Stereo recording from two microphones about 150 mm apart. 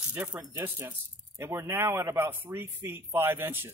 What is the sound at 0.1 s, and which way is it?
Speech, 10° right (ahead or behind).